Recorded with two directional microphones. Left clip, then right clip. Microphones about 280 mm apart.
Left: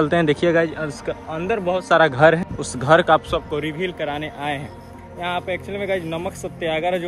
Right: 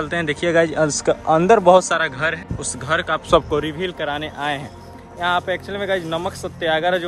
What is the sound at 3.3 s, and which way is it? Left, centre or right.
Speech, right.